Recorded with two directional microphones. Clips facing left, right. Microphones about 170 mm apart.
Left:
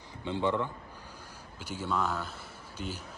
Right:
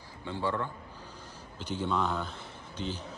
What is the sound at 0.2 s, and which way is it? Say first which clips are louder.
Speech: left 3 dB; 20° left (ahead or behind).